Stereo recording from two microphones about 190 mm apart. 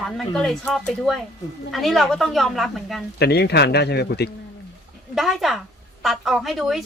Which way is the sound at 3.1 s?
60° left (ahead or behind).